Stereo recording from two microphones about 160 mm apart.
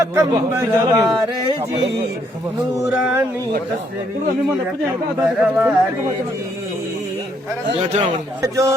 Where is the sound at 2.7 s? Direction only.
15° right (ahead or behind).